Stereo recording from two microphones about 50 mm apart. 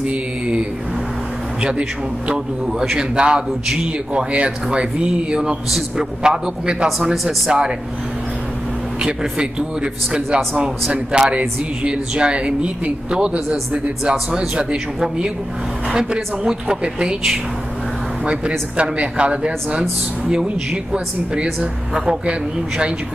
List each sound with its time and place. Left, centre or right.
0.0 s mantra: right
1.6 s a man's voice: right
9.0 s a man's voice: centre
18.8 s a man's voice: right